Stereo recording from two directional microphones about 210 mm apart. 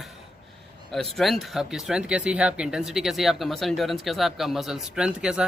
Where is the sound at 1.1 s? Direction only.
Centre (ahead or behind).